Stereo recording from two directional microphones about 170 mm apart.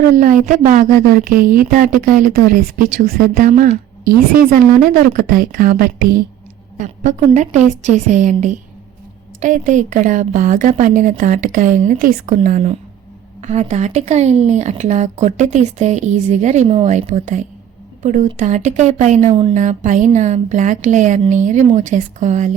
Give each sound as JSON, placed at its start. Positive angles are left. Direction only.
{"t": 0.2, "sound": "speech", "side_deg": -50}
{"t": 6.7, "sound": "speech", "side_deg": -45}